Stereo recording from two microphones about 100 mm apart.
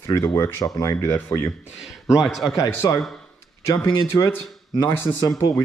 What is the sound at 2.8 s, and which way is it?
Speech, 40° left (ahead or behind).